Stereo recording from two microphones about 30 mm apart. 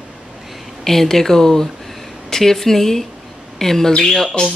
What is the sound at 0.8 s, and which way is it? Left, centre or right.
Speech, centre.